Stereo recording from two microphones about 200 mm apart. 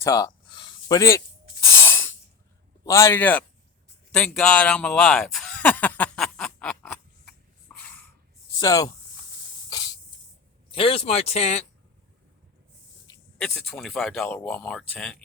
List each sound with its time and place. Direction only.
0.0 s a sound: 15° left (ahead or behind)
2.8 s a man's voice: 15° left (ahead or behind)
4.1 s a sound: 5° left (ahead or behind)
7.7 s snort: 10° left (ahead or behind)
8.6 s a man's voice: 15° left (ahead or behind)
10.7 s speech: 25° left (ahead or behind)
13.4 s speech: centre (ahead or behind)